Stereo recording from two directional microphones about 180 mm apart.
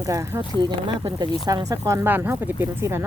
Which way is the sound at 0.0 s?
15° right (ahead or behind).